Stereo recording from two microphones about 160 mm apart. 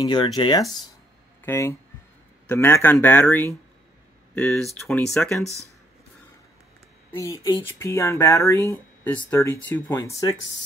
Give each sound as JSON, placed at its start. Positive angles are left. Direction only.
{"t": 0.0, "sound": "speech", "side_deg": 30}
{"t": 1.4, "sound": "speech", "side_deg": 15}
{"t": 7.1, "sound": "speech", "side_deg": 20}